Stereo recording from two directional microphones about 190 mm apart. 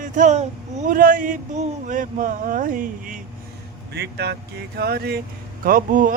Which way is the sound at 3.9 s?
60° right (ahead or behind).